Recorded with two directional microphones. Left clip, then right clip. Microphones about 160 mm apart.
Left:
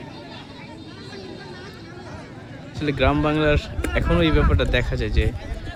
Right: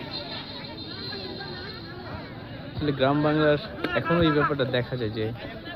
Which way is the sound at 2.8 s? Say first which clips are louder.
Left 3 dB; 35° left (ahead or behind).